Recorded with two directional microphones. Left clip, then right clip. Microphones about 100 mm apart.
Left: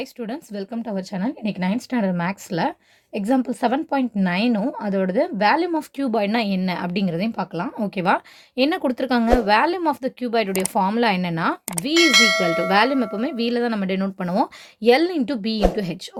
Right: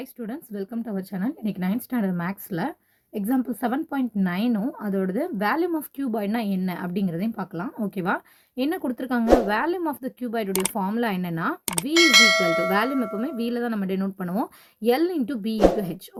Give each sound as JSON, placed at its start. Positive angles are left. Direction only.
{"t": 0.2, "sound": "a woman's voice", "side_deg": 10}
{"t": 2.1, "sound": "a woman's voice", "side_deg": 20}
{"t": 6.0, "sound": "a woman's voice", "side_deg": 30}
{"t": 11.9, "sound": "bell", "side_deg": 0}
{"t": 12.7, "sound": "a woman's voice", "side_deg": 25}